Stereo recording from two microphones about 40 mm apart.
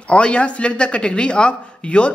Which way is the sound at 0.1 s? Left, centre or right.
Left.